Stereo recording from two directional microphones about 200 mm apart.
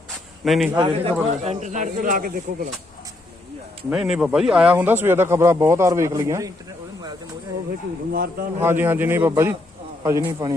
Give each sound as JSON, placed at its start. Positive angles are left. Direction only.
{"t": 0.4, "sound": "a man's voice", "side_deg": 0}
{"t": 0.8, "sound": "a man's voice", "side_deg": -25}
{"t": 1.5, "sound": "speech", "side_deg": -35}
{"t": 3.8, "sound": "speech", "side_deg": -5}
{"t": 8.1, "sound": "speech", "side_deg": -45}
{"t": 8.6, "sound": "speech", "side_deg": -10}